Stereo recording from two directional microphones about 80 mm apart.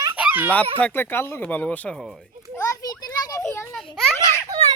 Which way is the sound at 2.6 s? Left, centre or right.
Left.